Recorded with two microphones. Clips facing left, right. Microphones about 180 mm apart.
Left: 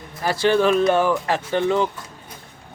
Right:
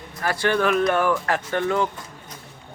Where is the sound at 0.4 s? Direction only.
25° left (ahead or behind).